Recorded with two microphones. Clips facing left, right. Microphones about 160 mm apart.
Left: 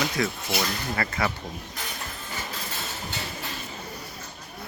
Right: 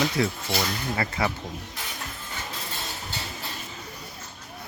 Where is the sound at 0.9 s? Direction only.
20° right (ahead or behind).